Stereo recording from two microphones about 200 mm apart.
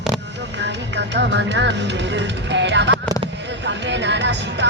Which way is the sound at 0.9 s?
60° right (ahead or behind).